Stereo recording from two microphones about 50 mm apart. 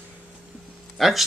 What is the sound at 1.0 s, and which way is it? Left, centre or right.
Speech, centre.